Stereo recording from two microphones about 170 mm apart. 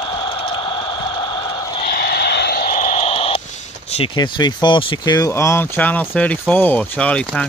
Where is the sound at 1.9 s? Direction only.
65° left (ahead or behind).